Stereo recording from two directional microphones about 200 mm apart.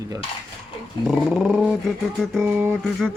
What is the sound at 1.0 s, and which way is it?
Dog, centre (ahead or behind).